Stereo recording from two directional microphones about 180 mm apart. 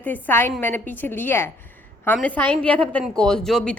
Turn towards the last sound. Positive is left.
turn(degrees=5)  # may be behind; listen again after turning